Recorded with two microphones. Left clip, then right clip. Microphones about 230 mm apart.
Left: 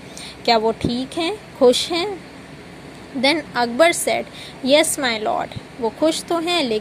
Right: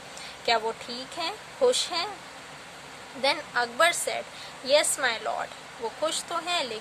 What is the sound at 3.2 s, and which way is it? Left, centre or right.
Speech, left.